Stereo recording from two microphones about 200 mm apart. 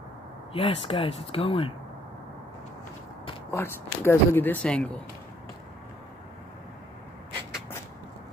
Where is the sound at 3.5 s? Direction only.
10° left (ahead or behind).